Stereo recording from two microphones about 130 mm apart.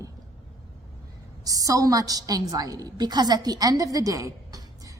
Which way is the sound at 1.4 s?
30° right (ahead or behind).